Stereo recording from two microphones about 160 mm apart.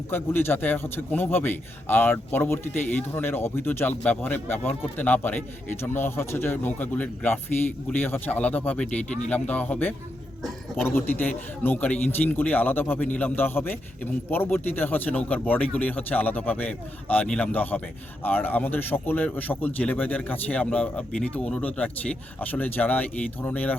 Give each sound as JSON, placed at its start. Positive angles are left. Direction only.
{"t": 0.1, "sound": "a man's voice", "side_deg": 15}